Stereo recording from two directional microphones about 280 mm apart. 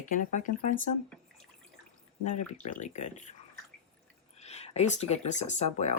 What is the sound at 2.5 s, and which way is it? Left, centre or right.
Speech, left.